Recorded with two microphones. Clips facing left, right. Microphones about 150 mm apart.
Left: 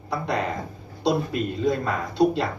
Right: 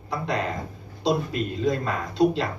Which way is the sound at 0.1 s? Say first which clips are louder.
Left 1 dB; 60° left (ahead or behind).